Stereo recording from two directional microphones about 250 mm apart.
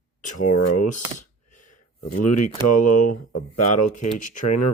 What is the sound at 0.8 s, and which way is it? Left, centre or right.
Speech, left.